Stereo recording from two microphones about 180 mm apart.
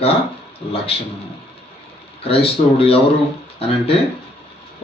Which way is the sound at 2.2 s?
30° left (ahead or behind).